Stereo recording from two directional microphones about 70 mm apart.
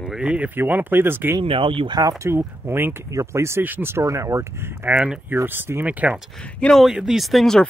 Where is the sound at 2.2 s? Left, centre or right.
Right.